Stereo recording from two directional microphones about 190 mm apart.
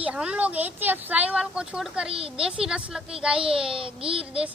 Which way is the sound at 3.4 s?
30° right (ahead or behind).